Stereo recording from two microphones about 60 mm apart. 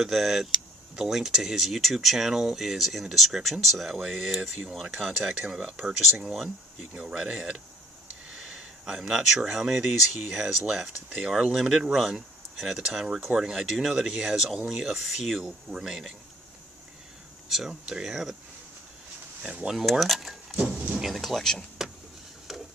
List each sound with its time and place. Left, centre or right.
0.0 s speech: centre
17.5 s speech: centre
19.4 s speech: centre
22.5 s a sound: centre